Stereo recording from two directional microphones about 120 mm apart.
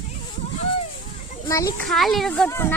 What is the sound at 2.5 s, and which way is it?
Speech, 20° left (ahead or behind).